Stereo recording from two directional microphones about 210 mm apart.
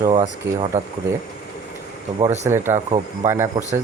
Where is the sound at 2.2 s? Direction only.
35° right (ahead or behind).